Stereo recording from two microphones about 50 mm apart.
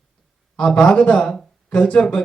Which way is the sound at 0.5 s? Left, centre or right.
Centre.